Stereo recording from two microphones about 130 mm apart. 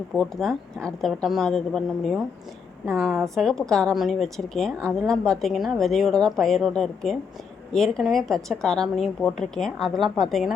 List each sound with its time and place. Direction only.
0.2 s a woman's voice: 5° left (ahead or behind)